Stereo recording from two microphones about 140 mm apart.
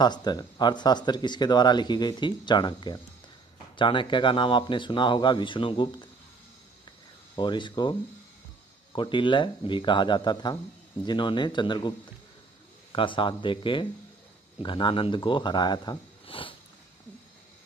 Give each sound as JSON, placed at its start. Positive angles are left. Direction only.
{"t": 0.0, "sound": "speech", "side_deg": 30}
{"t": 7.3, "sound": "speech", "side_deg": 35}
{"t": 8.9, "sound": "speech", "side_deg": 35}
{"t": 12.9, "sound": "speech", "side_deg": 35}
{"t": 16.3, "sound": "sniff", "side_deg": 40}